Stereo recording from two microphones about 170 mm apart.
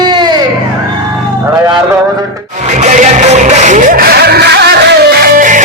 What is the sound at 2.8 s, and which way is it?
Music, 45° right (ahead or behind).